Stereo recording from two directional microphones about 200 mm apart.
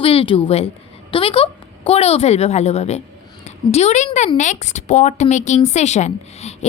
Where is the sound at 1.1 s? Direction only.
25° left (ahead or behind).